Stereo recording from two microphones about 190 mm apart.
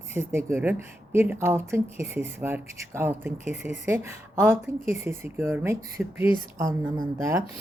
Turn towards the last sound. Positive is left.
turn(degrees=-15)  # may be behind; listen again after turning